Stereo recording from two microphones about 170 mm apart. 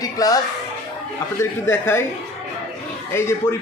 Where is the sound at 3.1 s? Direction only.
15° left (ahead or behind).